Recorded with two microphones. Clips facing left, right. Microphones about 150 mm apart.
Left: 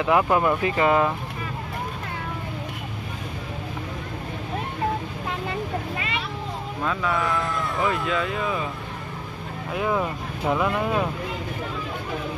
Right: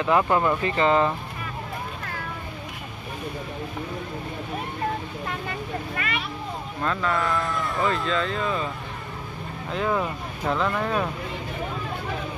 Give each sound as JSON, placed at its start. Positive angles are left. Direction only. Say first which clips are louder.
{"t": 0.0, "sound": "speech", "louder": "left 1 dB", "side_deg": 10}
{"t": 5.5, "sound": "vehicle", "louder": "left 3 dB", "side_deg": 25}
{"t": 6.8, "sound": "speech", "louder": "even", "side_deg": 5}
{"t": 9.7, "sound": "speech", "louder": "left 1 dB", "side_deg": 10}